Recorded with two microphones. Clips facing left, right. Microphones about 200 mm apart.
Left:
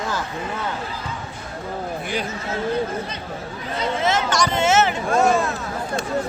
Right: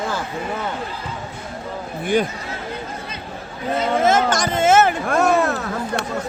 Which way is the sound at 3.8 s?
50° right (ahead or behind).